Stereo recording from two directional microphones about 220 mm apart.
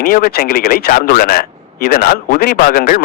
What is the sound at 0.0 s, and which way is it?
Speech, 40° left (ahead or behind).